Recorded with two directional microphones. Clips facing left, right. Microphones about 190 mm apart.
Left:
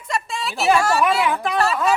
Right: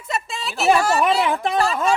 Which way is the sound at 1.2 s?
25° right (ahead or behind).